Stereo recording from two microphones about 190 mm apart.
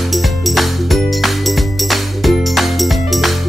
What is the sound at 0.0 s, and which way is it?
Music, centre (ahead or behind).